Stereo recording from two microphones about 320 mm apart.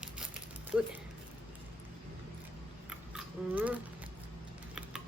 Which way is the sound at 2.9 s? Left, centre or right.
Centre.